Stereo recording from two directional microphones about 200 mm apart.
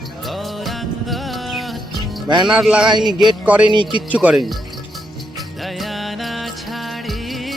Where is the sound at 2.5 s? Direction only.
5° right (ahead or behind).